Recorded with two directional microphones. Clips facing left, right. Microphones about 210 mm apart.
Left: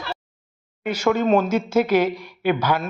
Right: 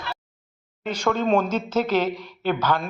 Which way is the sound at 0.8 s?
10° left (ahead or behind).